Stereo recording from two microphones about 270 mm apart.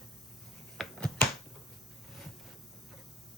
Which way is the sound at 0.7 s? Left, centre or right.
Centre.